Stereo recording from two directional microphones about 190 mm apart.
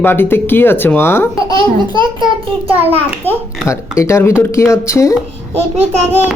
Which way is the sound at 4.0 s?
15° left (ahead or behind).